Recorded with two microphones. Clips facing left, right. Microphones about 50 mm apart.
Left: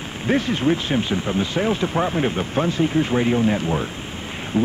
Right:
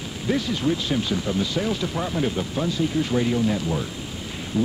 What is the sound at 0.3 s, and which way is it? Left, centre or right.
Speech, left.